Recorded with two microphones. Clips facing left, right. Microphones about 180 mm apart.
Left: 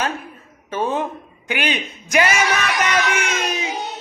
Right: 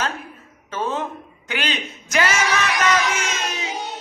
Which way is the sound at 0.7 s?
15° left (ahead or behind).